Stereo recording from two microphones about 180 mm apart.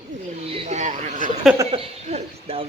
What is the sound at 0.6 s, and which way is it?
Speech, 40° right (ahead or behind).